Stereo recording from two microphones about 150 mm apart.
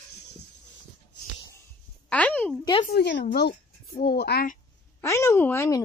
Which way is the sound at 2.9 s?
75° left (ahead or behind).